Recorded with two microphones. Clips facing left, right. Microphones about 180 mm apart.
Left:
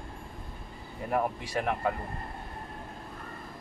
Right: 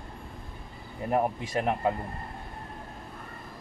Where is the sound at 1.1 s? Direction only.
25° right (ahead or behind).